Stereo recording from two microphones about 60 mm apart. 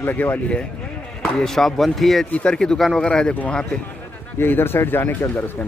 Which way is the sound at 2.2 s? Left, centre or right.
Centre.